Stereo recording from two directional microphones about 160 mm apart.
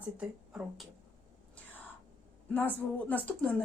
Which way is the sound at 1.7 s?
10° left (ahead or behind).